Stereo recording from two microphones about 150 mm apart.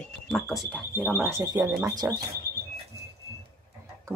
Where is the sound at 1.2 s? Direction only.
20° right (ahead or behind).